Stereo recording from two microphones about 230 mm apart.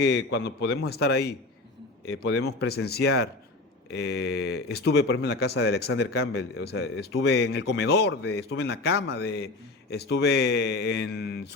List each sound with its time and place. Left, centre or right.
0.0 s speech: left